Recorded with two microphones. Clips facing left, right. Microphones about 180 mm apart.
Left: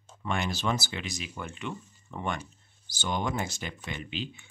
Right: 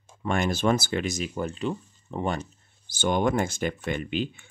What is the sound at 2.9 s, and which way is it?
Speech, 55° right (ahead or behind).